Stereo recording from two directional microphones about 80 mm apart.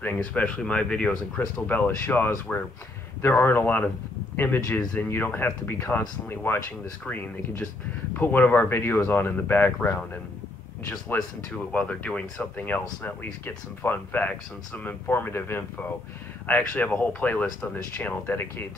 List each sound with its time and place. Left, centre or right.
0.0 s speech: left
11.1 s speech: centre